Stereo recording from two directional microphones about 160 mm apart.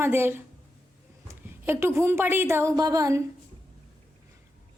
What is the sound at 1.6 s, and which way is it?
A woman's voice, 15° right (ahead or behind).